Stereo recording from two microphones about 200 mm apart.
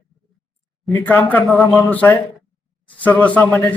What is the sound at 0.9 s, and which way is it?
A man's voice, 10° left (ahead or behind).